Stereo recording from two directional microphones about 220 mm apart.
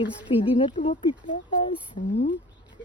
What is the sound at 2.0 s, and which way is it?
Speech, 35° left (ahead or behind).